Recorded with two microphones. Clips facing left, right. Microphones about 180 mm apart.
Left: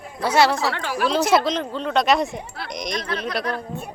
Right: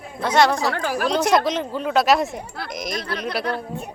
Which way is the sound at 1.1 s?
5° left (ahead or behind).